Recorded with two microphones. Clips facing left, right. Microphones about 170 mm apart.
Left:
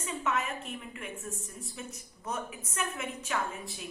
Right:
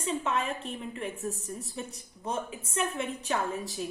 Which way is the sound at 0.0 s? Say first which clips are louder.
Right 3 dB; 30° right (ahead or behind).